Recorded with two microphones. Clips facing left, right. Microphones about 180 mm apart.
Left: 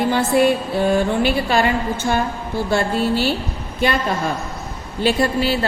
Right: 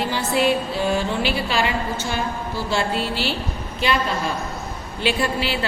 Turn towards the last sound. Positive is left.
turn(degrees=45)  # may be behind; listen again after turning